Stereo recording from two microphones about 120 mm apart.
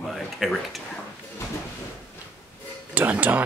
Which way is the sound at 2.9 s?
15° right (ahead or behind).